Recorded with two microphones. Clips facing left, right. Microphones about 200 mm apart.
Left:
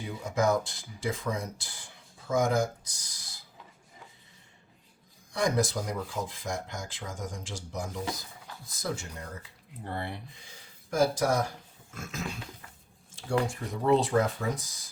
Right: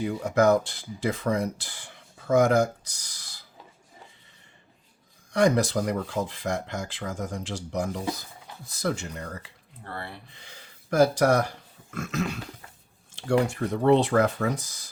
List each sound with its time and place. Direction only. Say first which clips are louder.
0.0 s speech: right 6 dB; 65° right (ahead or behind)
5.3 s speech: right 6 dB; 65° right (ahead or behind)
9.8 s speech: left 2 dB; 20° left (ahead or behind)
10.3 s speech: right 3 dB; 70° right (ahead or behind)